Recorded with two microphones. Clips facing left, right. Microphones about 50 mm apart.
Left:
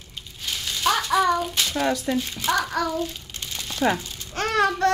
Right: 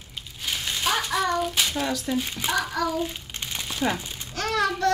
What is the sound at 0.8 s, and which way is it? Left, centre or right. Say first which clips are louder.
Child singing: left 4 dB; centre.